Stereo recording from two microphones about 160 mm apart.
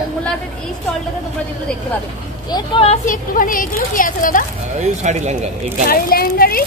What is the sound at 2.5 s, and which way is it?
Speech, 35° left (ahead or behind).